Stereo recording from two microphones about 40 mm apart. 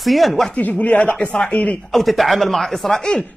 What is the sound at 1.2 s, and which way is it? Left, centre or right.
Speech, left.